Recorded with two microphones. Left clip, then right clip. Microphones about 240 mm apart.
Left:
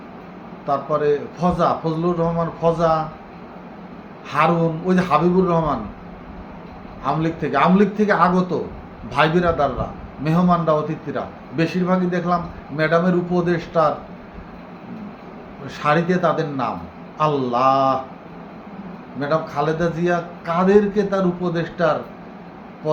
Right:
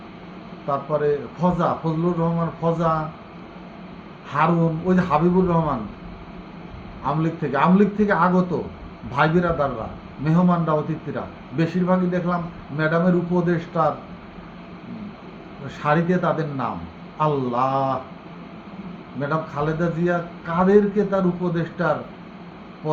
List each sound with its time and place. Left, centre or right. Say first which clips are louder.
0.7 s a man's voice: left 3 dB; centre
4.6 s a man's voice: left 2 dB; centre
7.0 s a man's voice: left 2 dB; centre
9.1 s a man's voice: left 3 dB; centre
15.6 s a man's voice: left 3 dB; centre
19.3 s a man's voice: left 5 dB; centre